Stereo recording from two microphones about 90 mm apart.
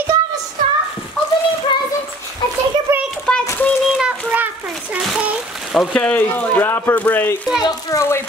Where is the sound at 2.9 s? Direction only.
30° right (ahead or behind).